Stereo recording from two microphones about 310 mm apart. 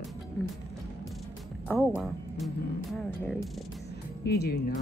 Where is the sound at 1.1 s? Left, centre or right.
Centre.